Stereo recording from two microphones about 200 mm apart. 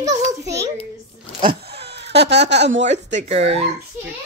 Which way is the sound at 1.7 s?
55° right (ahead or behind).